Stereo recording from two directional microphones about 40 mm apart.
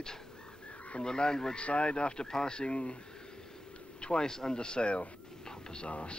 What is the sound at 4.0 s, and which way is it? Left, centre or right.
Speech, left.